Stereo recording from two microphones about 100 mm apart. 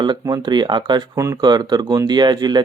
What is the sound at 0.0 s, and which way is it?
Speech, 45° right (ahead or behind).